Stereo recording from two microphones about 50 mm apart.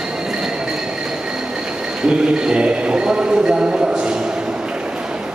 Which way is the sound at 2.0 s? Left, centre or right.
Centre.